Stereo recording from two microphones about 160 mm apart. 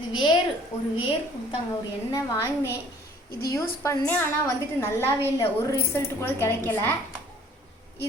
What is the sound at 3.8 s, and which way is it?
A woman's voice, 10° left (ahead or behind).